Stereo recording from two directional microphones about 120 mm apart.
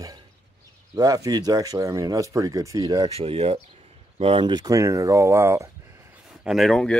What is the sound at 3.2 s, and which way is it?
Speech, 55° right (ahead or behind).